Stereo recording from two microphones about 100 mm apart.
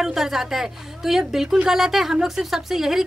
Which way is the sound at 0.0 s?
5° right (ahead or behind).